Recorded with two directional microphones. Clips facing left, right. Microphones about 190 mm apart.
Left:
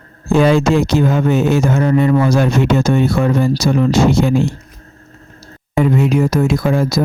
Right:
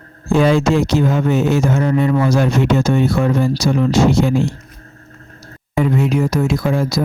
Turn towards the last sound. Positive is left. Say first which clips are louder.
# left 2 dB
turn(degrees=50)  # may be behind; listen again after turning